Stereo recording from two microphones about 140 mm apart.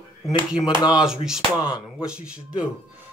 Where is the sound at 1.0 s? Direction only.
5° right (ahead or behind).